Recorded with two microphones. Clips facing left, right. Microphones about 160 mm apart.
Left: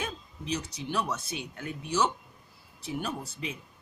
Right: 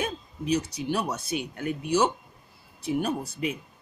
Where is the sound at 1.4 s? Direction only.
55° right (ahead or behind).